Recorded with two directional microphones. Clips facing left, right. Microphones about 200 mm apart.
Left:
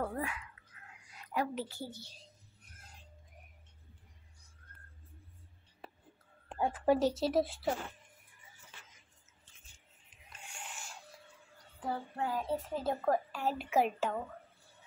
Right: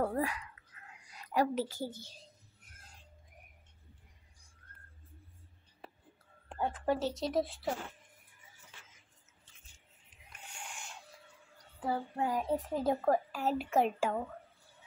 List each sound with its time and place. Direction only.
0.0 s a woman's voice: 40° right (ahead or behind)
6.6 s speech: 10° left (ahead or behind)
10.6 s a sound: centre (ahead or behind)
11.8 s a woman's voice: 10° right (ahead or behind)
13.9 s a woman's voice: 10° right (ahead or behind)